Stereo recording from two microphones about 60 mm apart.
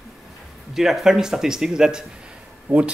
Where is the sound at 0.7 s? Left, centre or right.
Centre.